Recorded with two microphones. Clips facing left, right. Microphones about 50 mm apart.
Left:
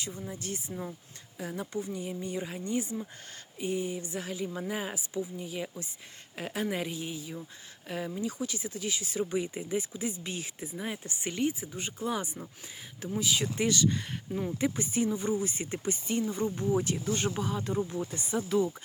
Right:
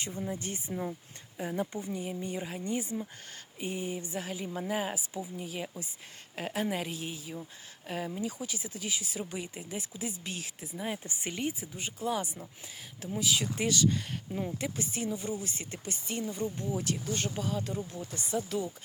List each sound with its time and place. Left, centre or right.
0.1 s a woman's voice: centre
3.6 s a woman's voice: centre
4.1 s speech: centre
11.0 s speech: centre